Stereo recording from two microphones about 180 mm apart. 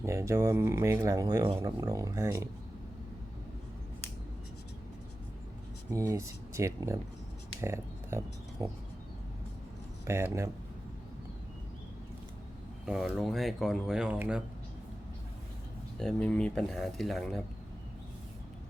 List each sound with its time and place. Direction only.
0.0 s speech: 15° right (ahead or behind)
5.9 s speech: 15° right (ahead or behind)
10.1 s speech: 15° right (ahead or behind)
12.8 s speech: centre (ahead or behind)
16.0 s speech: 5° left (ahead or behind)